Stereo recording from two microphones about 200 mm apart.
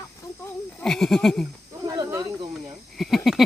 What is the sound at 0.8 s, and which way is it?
Speech, centre (ahead or behind).